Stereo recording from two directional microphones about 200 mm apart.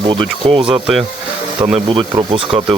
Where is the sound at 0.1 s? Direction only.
25° right (ahead or behind).